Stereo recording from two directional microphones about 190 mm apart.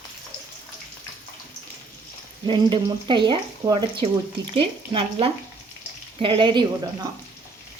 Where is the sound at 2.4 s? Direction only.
25° right (ahead or behind).